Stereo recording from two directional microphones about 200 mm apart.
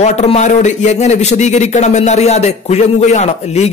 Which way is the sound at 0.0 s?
35° left (ahead or behind).